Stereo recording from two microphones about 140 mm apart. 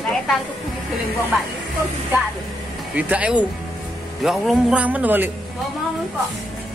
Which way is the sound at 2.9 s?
10° right (ahead or behind).